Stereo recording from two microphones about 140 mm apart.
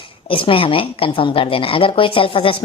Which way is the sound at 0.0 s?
40° left (ahead or behind).